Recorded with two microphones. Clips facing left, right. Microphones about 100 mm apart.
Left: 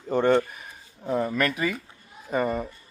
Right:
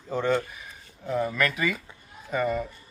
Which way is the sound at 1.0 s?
35° left (ahead or behind).